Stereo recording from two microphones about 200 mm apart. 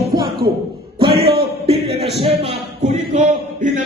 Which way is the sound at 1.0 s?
50° right (ahead or behind).